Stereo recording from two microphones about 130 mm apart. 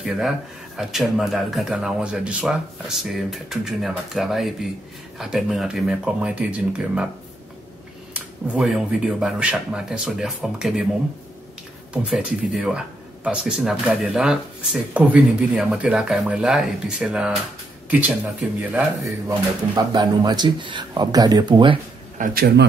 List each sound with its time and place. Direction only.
0.0 s speech: centre (ahead or behind)
8.1 s speech: 5° right (ahead or behind)
11.9 s speech: 5° right (ahead or behind)
18.6 s speech: 10° right (ahead or behind)
19.7 s speech: 30° right (ahead or behind)
22.2 s a man's voice: 90° right